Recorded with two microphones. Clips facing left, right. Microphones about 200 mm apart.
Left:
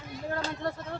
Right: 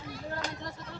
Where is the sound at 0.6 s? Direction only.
60° left (ahead or behind).